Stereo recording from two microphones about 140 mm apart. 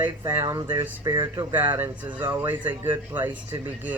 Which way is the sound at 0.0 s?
20° right (ahead or behind).